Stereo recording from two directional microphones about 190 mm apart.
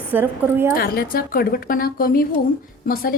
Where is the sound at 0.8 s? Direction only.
50° left (ahead or behind).